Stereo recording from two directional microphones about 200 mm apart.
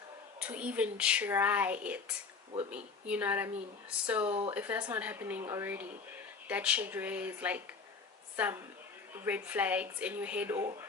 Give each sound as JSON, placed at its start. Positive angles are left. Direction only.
{"t": 0.4, "sound": "speech", "side_deg": -5}
{"t": 4.3, "sound": "speech", "side_deg": -25}
{"t": 4.5, "sound": "speech", "side_deg": -10}
{"t": 9.1, "sound": "speech", "side_deg": -10}